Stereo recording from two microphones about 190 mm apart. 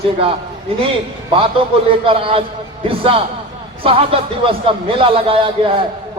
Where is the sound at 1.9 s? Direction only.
30° right (ahead or behind).